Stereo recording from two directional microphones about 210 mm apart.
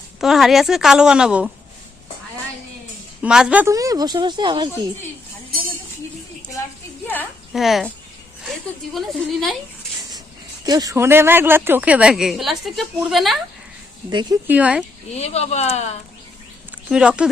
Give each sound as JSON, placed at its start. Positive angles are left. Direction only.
{"t": 0.2, "sound": "a woman's voice", "side_deg": 0}
{"t": 3.2, "sound": "a woman's voice", "side_deg": -5}
{"t": 7.1, "sound": "a sound", "side_deg": 5}
{"t": 8.4, "sound": "a woman's voice", "side_deg": 0}
{"t": 10.7, "sound": "a woman's voice", "side_deg": -15}
{"t": 14.1, "sound": "speech", "side_deg": -20}
{"t": 14.4, "sound": "a woman's voice", "side_deg": -5}
{"t": 15.1, "sound": "speech", "side_deg": 30}
{"t": 16.9, "sound": "a woman's voice", "side_deg": -5}